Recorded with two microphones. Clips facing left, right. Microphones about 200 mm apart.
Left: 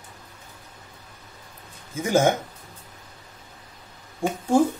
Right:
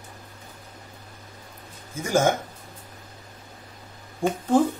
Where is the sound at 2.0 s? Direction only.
20° left (ahead or behind).